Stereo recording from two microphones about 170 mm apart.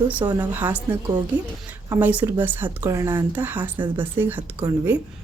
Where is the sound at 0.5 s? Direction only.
10° right (ahead or behind).